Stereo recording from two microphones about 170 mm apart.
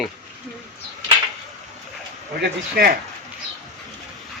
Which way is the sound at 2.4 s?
70° right (ahead or behind).